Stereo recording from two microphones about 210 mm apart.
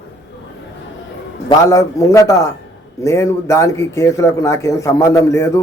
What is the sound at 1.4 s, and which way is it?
Speech, 15° left (ahead or behind).